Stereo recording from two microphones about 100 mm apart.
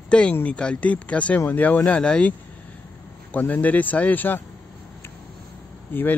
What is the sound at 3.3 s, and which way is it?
Speech, 15° left (ahead or behind).